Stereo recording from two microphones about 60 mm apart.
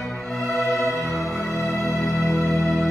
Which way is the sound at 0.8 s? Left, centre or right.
Left.